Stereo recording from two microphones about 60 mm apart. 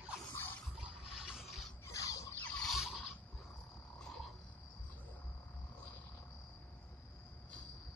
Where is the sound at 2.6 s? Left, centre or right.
Centre.